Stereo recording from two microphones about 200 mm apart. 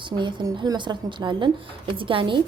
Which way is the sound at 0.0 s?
25° right (ahead or behind).